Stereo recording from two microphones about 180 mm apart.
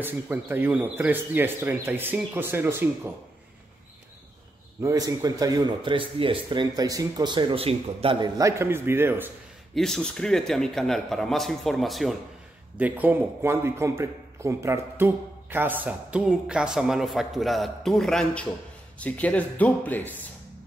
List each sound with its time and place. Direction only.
0.0 s speech: 10° right (ahead or behind)
4.8 s speech: 20° right (ahead or behind)
8.4 s speech: 15° right (ahead or behind)
9.8 s a man's voice: centre (ahead or behind)